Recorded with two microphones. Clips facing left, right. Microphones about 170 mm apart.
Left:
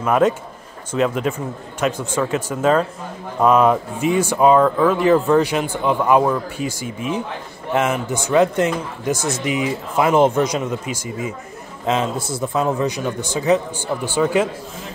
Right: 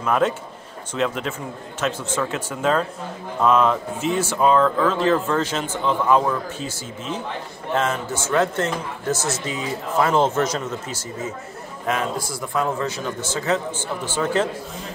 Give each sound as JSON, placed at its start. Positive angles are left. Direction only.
{"t": 0.0, "sound": "speech", "side_deg": 5}